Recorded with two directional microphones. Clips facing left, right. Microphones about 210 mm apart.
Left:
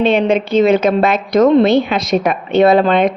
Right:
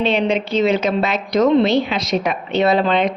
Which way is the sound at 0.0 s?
50° left (ahead or behind).